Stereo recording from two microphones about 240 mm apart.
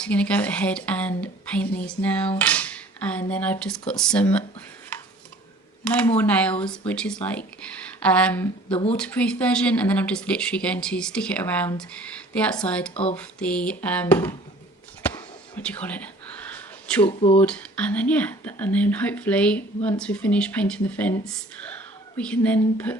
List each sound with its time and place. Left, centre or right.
0.0 s speech: centre
5.8 s speech: centre
8.7 s speech: left
9.0 s speech: centre
12.9 s speech: left
13.1 s speech: centre
15.0 s a sound: centre
17.1 s speech: left
17.4 s speech: centre